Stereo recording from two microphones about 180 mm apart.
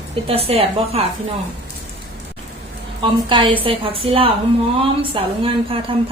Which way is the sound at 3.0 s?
30° right (ahead or behind).